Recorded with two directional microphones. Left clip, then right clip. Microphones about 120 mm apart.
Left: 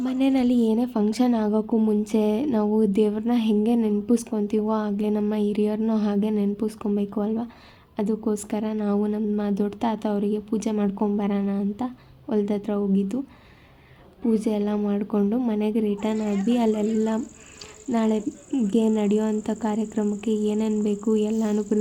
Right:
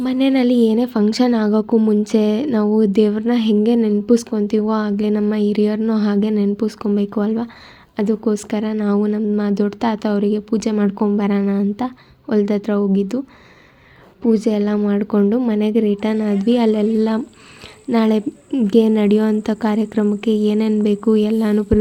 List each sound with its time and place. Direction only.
0.0 s speech: 25° right (ahead or behind)
14.3 s speech: 20° right (ahead or behind)